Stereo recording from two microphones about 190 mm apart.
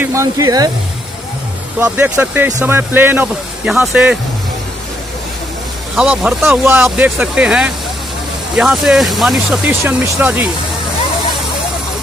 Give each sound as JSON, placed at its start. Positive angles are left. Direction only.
{"t": 0.0, "sound": "speech", "side_deg": -15}
{"t": 1.8, "sound": "speech", "side_deg": -10}
{"t": 6.0, "sound": "speech", "side_deg": -10}